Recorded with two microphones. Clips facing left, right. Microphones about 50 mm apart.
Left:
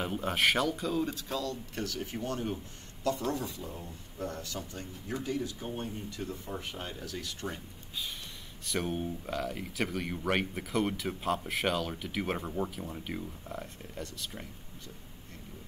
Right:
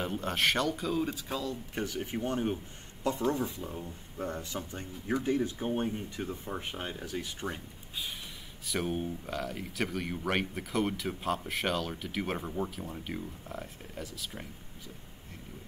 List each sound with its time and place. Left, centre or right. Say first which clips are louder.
0.0 s speech: left 1 dB; centre
8.6 s speech: even; centre